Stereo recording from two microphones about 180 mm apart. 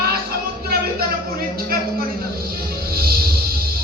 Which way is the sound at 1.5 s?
55° right (ahead or behind).